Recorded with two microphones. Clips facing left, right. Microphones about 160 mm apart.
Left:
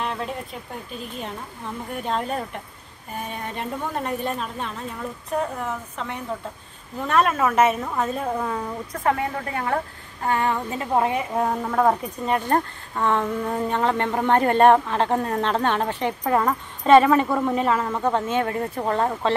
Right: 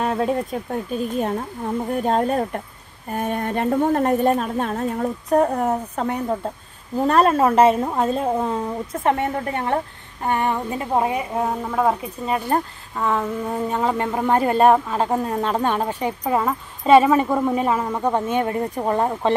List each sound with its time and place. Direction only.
0.0 s a woman's voice: 45° right (ahead or behind)
3.1 s a woman's voice: 55° right (ahead or behind); by 11.2 s 20° right (ahead or behind)
11.3 s speech: 5° right (ahead or behind)